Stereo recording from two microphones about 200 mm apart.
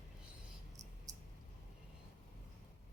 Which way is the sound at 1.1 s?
20° right (ahead or behind).